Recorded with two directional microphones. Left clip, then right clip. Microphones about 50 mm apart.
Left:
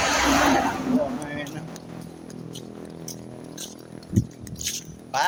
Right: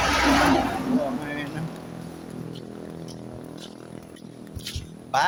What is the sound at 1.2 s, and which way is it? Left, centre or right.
Vehicle, centre.